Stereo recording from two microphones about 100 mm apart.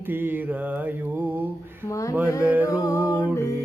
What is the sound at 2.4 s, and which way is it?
Mantra, 15° right (ahead or behind).